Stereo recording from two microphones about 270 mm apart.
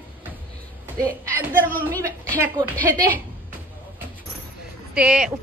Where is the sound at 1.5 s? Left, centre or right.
Right.